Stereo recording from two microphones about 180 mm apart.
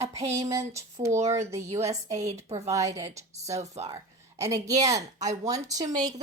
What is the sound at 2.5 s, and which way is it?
A woman's voice, 20° right (ahead or behind).